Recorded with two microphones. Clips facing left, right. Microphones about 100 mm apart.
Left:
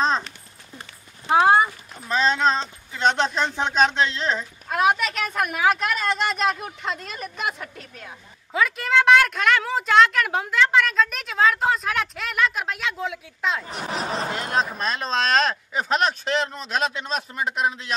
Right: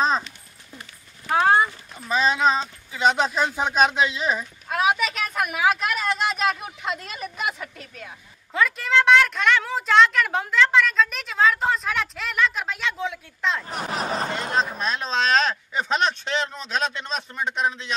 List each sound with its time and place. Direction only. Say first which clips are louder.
1.3 s horse: left 2 dB; 10° left (ahead or behind)
2.0 s speech: even; 5° right (ahead or behind)